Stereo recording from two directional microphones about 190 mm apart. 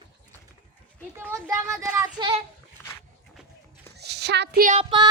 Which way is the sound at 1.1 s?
15° right (ahead or behind).